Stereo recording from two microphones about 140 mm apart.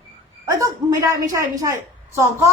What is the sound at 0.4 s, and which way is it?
A woman's voice, 25° right (ahead or behind).